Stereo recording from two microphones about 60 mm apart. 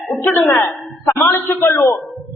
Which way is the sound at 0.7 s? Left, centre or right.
Left.